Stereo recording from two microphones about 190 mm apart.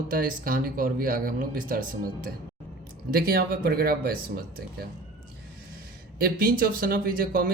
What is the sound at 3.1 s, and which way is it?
Speech, 55° right (ahead or behind).